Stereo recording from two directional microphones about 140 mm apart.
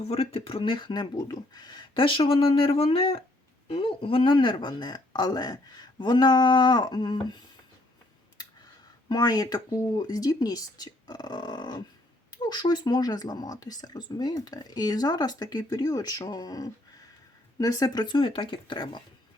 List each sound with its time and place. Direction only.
0.1 s speech: 45° left (ahead or behind)
9.0 s speech: 30° left (ahead or behind)